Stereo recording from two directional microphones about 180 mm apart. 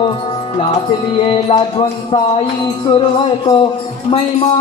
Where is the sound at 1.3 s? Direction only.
30° left (ahead or behind).